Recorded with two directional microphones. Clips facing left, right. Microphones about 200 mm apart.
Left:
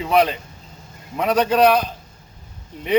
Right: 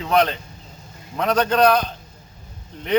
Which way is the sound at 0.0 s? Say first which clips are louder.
Left 1 dB; 5° left (ahead or behind).